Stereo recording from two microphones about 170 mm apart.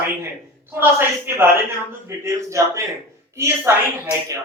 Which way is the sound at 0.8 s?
10° right (ahead or behind).